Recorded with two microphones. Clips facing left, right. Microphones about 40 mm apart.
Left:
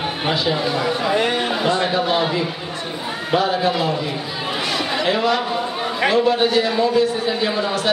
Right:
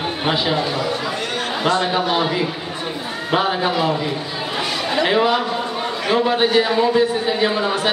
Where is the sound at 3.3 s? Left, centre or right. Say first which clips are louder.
Even; centre.